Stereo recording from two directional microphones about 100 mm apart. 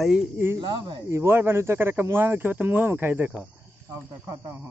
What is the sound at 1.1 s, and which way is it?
Speech, 25° right (ahead or behind).